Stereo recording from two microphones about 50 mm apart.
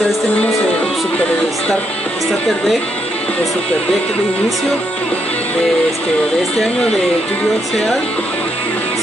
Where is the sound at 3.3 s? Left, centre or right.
Left.